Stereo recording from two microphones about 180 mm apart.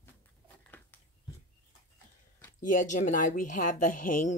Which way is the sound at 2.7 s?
45° left (ahead or behind).